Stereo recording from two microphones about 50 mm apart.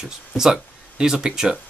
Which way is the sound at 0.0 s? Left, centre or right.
Centre.